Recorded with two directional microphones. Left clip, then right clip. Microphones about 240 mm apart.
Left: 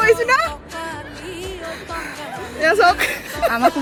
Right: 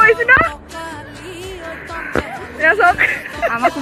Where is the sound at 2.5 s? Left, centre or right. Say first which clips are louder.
Right 2 dB; centre.